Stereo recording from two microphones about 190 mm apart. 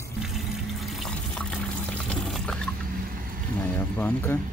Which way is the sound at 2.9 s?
45° right (ahead or behind).